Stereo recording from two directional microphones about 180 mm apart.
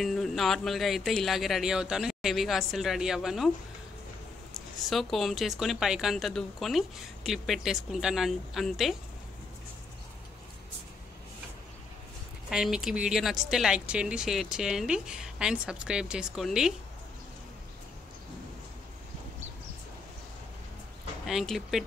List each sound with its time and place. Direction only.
0.0 s a woman's voice: centre (ahead or behind)
4.7 s a woman's voice: centre (ahead or behind)
12.4 s a woman's voice: 5° right (ahead or behind)
21.3 s a woman's voice: centre (ahead or behind)